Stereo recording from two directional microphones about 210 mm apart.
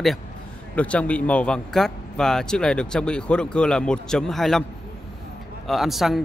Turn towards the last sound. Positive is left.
turn(degrees=0)  # may be behind; listen again after turning